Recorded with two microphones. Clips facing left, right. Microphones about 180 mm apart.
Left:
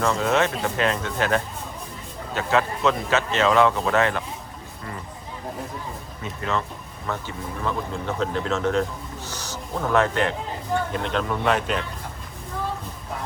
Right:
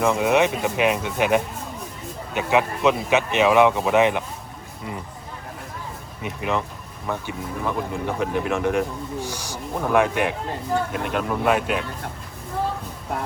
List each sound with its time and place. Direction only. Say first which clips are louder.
0.0 s speech: right 3 dB; 15° right (ahead or behind)
6.2 s speech: right 2 dB; 15° right (ahead or behind)